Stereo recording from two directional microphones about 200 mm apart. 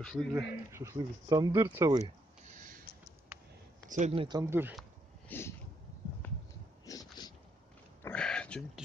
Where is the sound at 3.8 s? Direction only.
35° right (ahead or behind).